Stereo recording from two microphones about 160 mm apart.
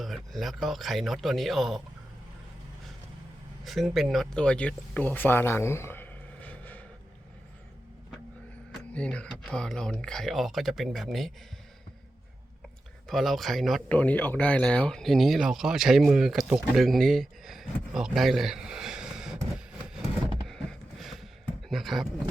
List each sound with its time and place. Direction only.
0.0 s speech: centre (ahead or behind)
3.6 s speech: centre (ahead or behind)
8.9 s speech: 5° left (ahead or behind)
13.1 s speech: centre (ahead or behind)
20.5 s a sound: centre (ahead or behind)
21.7 s speech: centre (ahead or behind)